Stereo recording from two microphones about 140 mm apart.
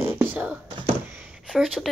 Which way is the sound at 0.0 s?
15° right (ahead or behind).